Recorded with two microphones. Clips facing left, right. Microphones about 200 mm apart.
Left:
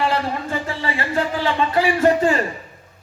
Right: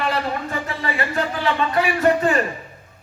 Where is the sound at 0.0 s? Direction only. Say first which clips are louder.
Left 2 dB; 30° left (ahead or behind).